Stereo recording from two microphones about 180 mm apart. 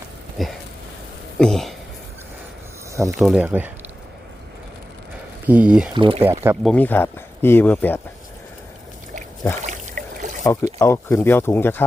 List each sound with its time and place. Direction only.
0.4 s speech: centre (ahead or behind)
3.1 s speech: centre (ahead or behind)
5.5 s speech: 5° right (ahead or behind)
5.9 s speech: 30° right (ahead or behind)
6.2 s speech: 15° right (ahead or behind)
6.6 s speech: 5° left (ahead or behind)
9.6 s trickle: 45° right (ahead or behind)
10.4 s speech: 15° left (ahead or behind)